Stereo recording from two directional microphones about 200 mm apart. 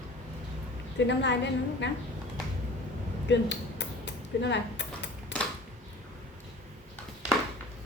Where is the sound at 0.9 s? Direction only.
60° left (ahead or behind).